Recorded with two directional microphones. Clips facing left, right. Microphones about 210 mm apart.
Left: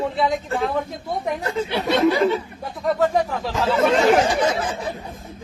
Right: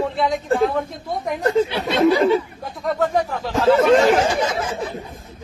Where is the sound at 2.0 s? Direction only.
Centre (ahead or behind).